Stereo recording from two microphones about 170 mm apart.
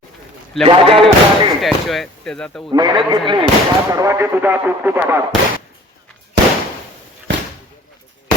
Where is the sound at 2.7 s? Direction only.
25° right (ahead or behind).